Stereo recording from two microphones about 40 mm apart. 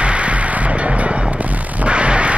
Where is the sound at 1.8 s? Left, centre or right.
Right.